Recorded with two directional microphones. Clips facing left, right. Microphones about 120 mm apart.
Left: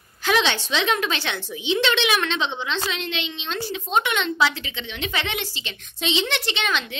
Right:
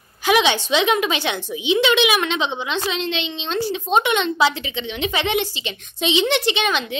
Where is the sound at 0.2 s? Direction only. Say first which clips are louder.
Right 4 dB; 15° right (ahead or behind).